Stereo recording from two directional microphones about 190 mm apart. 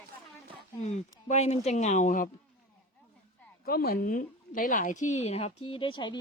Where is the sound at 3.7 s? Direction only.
50° left (ahead or behind); by 6.1 s 25° left (ahead or behind).